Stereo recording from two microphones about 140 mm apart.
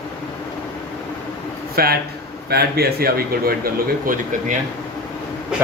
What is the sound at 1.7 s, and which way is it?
Speech, 90° right.